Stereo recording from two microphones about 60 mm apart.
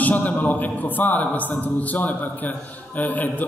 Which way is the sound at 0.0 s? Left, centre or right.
Left.